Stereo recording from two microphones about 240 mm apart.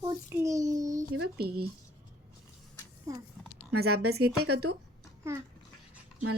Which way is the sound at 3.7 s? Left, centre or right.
Right.